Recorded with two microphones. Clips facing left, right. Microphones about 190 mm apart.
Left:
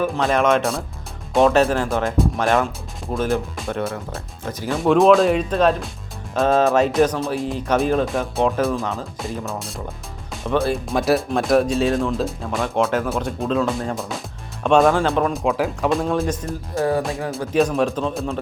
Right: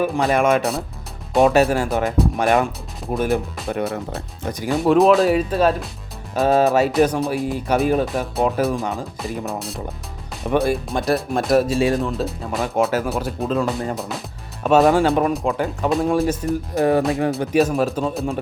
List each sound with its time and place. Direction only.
0.0 s speech: 10° right (ahead or behind)
2.4 s speech: 15° right (ahead or behind)
3.7 s speech: centre (ahead or behind)
4.4 s speech: 15° right (ahead or behind)
4.8 s speech: centre (ahead or behind)
10.5 s speech: 15° right (ahead or behind)
10.8 s speech: centre (ahead or behind)
16.7 s speech: 20° right (ahead or behind)
17.3 s speech: 5° right (ahead or behind)